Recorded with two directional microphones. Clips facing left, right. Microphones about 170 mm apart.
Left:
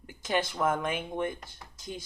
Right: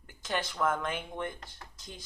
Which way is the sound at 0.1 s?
10° left (ahead or behind).